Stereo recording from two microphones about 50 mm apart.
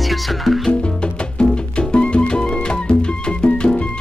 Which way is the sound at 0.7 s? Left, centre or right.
Centre.